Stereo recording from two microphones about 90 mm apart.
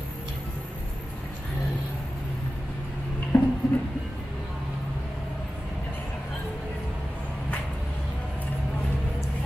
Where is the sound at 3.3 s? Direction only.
25° left (ahead or behind).